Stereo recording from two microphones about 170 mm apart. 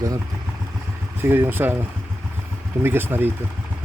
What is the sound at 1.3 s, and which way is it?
Speech, 10° right (ahead or behind).